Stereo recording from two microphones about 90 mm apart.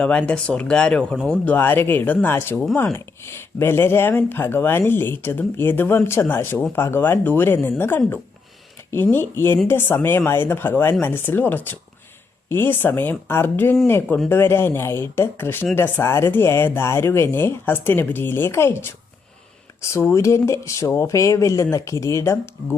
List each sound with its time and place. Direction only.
0.0 s speech: 15° left (ahead or behind); by 22.4 s 35° left (ahead or behind)